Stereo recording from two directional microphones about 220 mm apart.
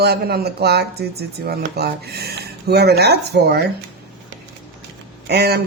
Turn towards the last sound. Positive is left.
turn(degrees=-45)  # may be behind; listen again after turning